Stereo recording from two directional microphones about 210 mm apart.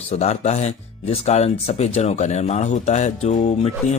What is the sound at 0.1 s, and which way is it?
Speech, 30° left (ahead or behind).